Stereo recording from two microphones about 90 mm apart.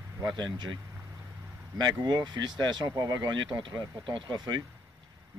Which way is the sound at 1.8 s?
50° right (ahead or behind).